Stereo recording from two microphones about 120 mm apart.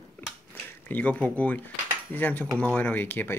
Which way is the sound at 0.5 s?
15° left (ahead or behind).